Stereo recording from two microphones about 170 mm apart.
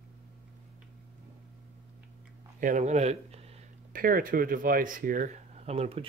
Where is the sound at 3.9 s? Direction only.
55° right (ahead or behind).